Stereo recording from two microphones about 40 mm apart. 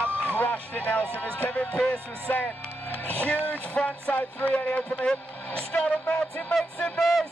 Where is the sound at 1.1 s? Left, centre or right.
Left.